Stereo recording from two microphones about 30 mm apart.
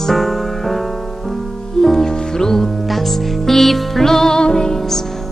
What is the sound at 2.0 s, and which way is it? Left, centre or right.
Music, centre.